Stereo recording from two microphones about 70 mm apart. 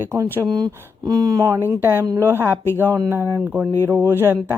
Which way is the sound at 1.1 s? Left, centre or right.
Right.